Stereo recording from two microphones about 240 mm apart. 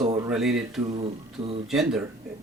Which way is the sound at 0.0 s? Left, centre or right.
Centre.